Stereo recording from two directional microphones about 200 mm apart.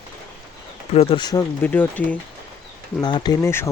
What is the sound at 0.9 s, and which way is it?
Speech, 30° left (ahead or behind).